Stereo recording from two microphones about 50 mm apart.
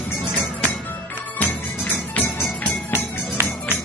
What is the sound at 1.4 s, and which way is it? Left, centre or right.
Music, left.